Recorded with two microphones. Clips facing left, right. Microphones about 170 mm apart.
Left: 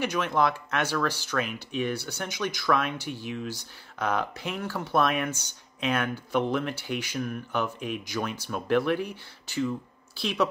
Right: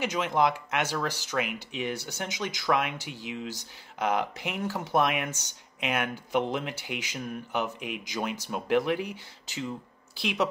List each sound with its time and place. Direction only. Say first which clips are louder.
0.0 s speech: even; 20° right (ahead or behind)